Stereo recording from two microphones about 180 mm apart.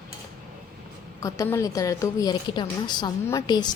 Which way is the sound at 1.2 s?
20° left (ahead or behind).